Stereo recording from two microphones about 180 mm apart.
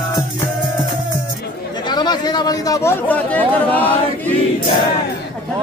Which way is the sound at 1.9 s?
25° left (ahead or behind).